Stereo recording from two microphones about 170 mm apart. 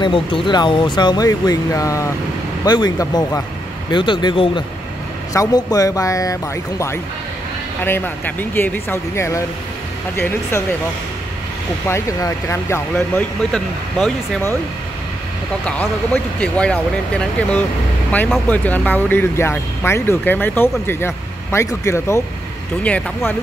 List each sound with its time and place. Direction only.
0.0 s speech: 30° left (ahead or behind)
7.8 s speech: 10° left (ahead or behind)
11.9 s speech: 20° left (ahead or behind)
15.6 s speech: 10° left (ahead or behind)